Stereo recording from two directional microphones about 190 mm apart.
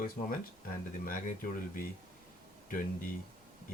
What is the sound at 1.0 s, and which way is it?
Speech, 45° left (ahead or behind).